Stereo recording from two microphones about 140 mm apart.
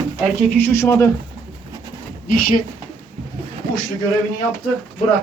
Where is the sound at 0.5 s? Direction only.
15° left (ahead or behind).